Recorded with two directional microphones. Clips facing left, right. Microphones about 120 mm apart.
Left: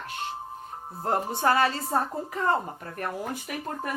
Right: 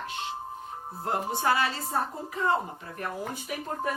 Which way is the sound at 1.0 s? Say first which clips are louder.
Left 3 dB; 40° left (ahead or behind).